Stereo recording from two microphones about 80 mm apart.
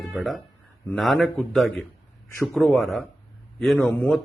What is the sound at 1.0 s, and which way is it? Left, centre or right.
Speech, centre.